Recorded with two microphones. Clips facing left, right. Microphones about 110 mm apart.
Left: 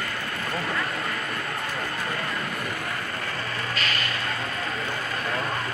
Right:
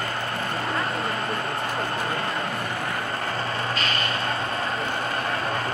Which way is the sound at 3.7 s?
30° right (ahead or behind).